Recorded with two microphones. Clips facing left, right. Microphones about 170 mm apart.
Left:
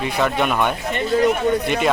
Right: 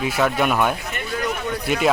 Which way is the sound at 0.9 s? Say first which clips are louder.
Left 8 dB; 25° left (ahead or behind).